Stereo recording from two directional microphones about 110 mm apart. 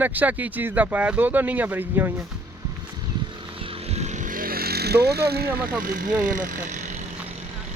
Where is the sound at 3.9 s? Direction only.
90° right.